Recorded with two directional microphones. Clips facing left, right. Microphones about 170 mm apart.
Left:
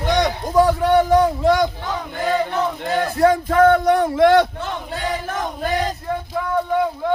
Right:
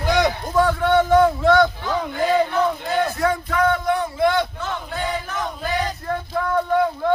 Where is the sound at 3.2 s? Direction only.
40° left (ahead or behind).